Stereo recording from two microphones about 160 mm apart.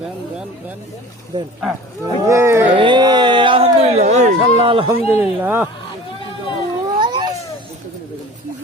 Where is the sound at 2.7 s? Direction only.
30° right (ahead or behind).